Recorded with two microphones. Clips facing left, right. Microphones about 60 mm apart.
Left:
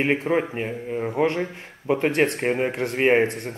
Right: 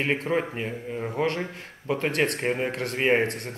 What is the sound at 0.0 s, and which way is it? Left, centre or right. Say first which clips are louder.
Speech: left 4 dB; centre.